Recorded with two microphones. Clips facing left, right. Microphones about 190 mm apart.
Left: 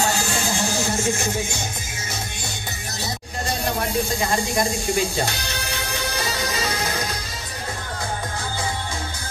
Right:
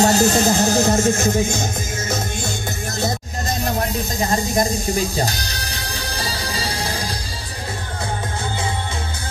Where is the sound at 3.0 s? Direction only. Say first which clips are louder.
Right 5 dB; 40° right (ahead or behind).